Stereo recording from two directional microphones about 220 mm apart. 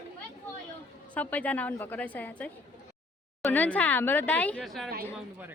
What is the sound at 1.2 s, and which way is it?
A woman's voice, 5° left (ahead or behind).